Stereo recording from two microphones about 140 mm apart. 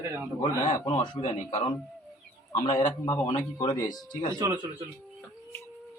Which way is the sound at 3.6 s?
25° left (ahead or behind).